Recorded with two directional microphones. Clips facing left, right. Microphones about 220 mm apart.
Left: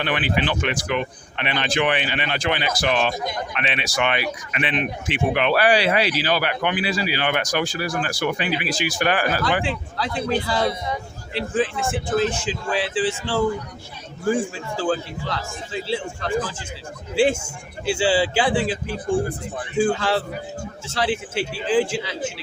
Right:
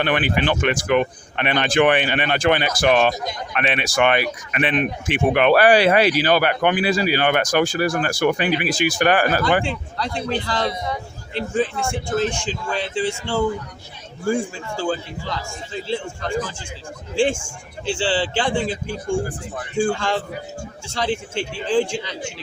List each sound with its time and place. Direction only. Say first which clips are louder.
0.0 s speech: right 3 dB; 50° right (ahead or behind)
9.6 s a man's voice: even; 5° left (ahead or behind)
17.2 s a man's voice: left 1 dB; 5° left (ahead or behind)
18.9 s speech: left 1 dB; 35° left (ahead or behind)
19.7 s a man's voice: left 1 dB; 5° left (ahead or behind)